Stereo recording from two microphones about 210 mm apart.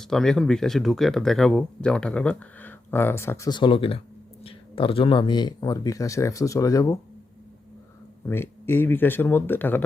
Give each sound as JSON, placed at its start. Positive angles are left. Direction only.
{"t": 0.0, "sound": "speech", "side_deg": 0}
{"t": 8.3, "sound": "speech", "side_deg": 10}